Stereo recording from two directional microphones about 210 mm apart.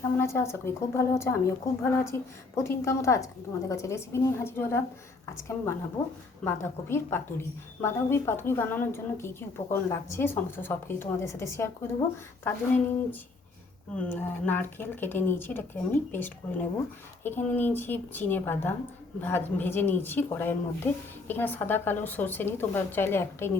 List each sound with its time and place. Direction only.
0.2 s a woman's voice: 10° left (ahead or behind)
6.4 s a woman's voice: 10° left (ahead or behind)